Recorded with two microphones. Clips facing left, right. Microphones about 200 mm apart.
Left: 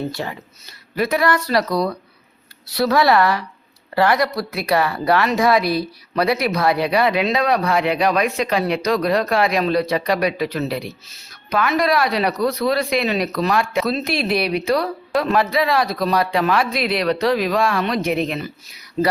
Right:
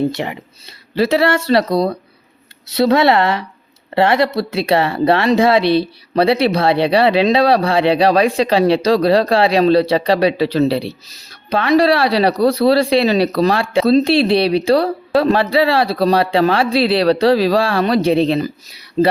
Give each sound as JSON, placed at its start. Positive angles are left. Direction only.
{"t": 0.1, "sound": "speech", "side_deg": -20}